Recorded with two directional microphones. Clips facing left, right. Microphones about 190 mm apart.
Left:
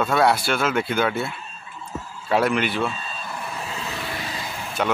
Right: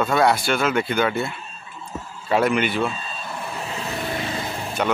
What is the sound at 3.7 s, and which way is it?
Vehicle, 25° right (ahead or behind).